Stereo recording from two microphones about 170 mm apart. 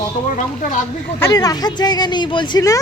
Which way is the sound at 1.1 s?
20° left (ahead or behind).